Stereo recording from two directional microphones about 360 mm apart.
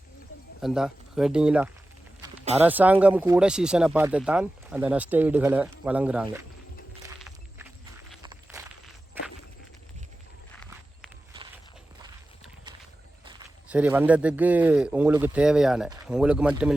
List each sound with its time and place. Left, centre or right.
0.6 s speech: centre
2.2 s a sound: centre
2.6 s speech: centre
7.2 s walk: centre
10.6 s walk: centre
13.2 s speech: centre